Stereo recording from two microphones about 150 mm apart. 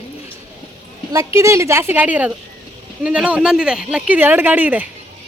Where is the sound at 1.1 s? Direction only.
20° right (ahead or behind).